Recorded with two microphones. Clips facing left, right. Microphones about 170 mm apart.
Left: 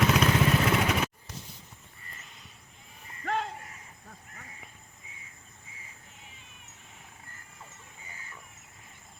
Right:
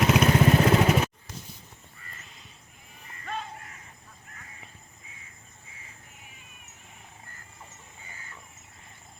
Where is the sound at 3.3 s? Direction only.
75° left (ahead or behind).